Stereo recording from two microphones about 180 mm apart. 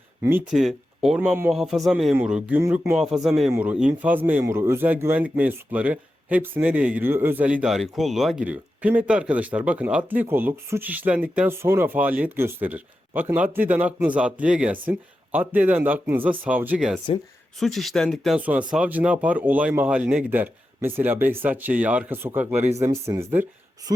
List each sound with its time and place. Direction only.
0.2 s speech: 10° right (ahead or behind)
0.5 s speech: centre (ahead or behind)
2.9 s speech: centre (ahead or behind)